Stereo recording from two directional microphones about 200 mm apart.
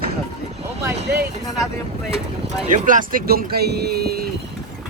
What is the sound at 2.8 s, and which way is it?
Speech, 40° right (ahead or behind).